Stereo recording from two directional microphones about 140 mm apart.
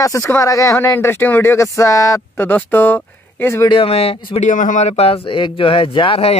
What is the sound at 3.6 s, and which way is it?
Speech, 40° left (ahead or behind).